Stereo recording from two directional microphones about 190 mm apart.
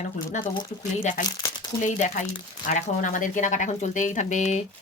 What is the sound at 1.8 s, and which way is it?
Speech, 40° left (ahead or behind).